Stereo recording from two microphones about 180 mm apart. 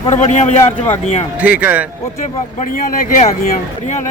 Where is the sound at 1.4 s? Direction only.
10° right (ahead or behind).